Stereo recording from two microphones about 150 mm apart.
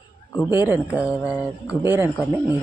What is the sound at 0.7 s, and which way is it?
Speech, 10° right (ahead or behind).